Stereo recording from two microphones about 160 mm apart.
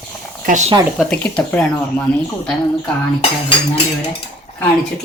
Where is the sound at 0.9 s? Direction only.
5° left (ahead or behind).